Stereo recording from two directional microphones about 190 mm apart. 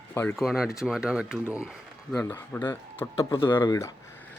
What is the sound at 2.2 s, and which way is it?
A man's voice, 10° left (ahead or behind).